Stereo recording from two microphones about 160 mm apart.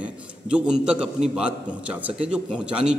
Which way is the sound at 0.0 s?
5° right (ahead or behind).